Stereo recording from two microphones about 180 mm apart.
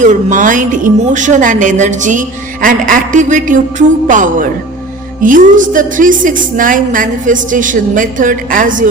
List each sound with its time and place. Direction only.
0.0 s speech: 45° right (ahead or behind)